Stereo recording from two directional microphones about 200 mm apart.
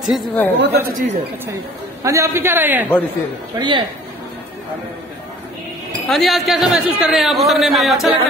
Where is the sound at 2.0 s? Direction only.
15° right (ahead or behind).